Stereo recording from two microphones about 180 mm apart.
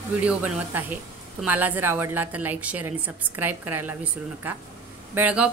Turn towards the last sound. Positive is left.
turn(degrees=-10)  # may be behind; listen again after turning